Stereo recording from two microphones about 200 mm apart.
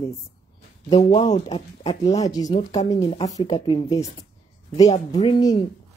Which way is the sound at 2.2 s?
20° left (ahead or behind).